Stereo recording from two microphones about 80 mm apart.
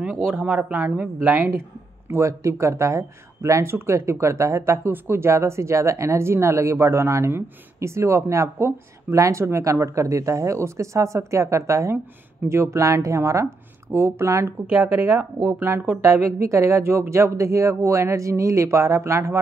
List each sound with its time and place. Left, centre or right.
0.4 s a woman's voice: centre; by 4.7 s right
4.8 s speech: right
12.4 s a woman's voice: right
12.7 s speech: right
16.0 s speech: right